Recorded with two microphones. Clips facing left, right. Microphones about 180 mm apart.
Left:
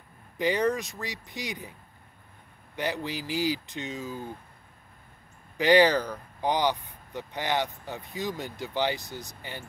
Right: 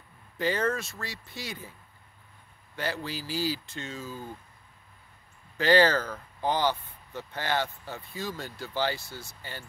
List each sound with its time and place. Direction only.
0.4 s speech: 15° left (ahead or behind)
5.6 s speech: 15° left (ahead or behind)